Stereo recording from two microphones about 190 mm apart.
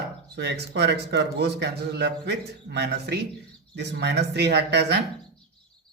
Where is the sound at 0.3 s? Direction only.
65° right (ahead or behind).